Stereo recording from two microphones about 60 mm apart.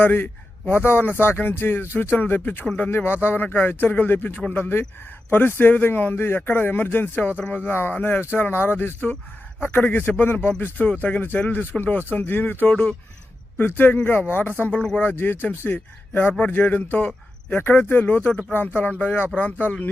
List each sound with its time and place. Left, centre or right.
0.0 s speech: left
12.7 s speech: left
13.6 s speech: left
17.5 s speech: left